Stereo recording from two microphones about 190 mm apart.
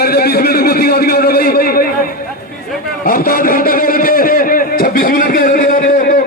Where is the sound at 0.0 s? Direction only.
55° left (ahead or behind).